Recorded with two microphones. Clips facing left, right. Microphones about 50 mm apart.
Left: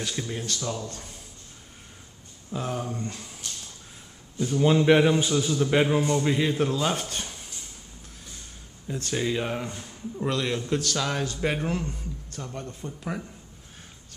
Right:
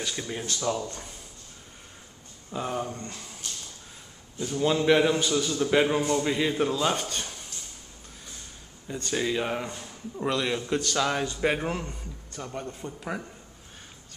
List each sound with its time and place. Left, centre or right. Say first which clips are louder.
0.0 s a man's voice: left 1 dB; centre
2.5 s a man's voice: even; centre
4.6 s a man's voice: left 2 dB; centre
8.8 s a man's voice: even; centre